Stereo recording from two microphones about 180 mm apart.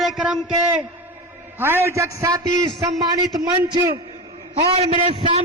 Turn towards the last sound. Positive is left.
turn(degrees=-30)  # may be behind; listen again after turning